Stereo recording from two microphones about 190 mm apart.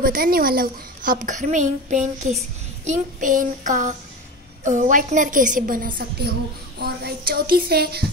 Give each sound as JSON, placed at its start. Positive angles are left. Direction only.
{"t": 0.0, "sound": "a woman's voice", "side_deg": -50}
{"t": 2.8, "sound": "child singing", "side_deg": -40}
{"t": 4.6, "sound": "a woman's voice", "side_deg": -40}